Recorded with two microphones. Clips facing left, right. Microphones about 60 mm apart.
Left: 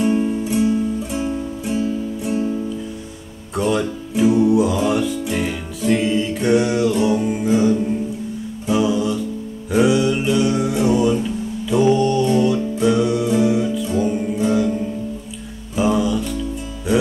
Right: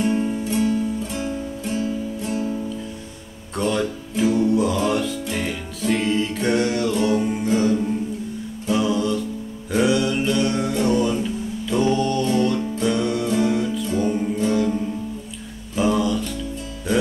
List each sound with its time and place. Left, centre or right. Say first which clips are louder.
0.0 s music: left 3 dB; centre
3.5 s music: left 3 dB; centre
15.7 s music: left 2 dB; centre